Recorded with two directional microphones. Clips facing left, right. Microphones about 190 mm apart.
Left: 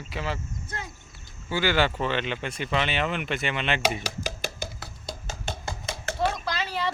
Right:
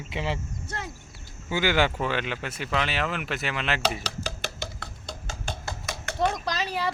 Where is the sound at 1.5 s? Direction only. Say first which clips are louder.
Even; 15° right (ahead or behind).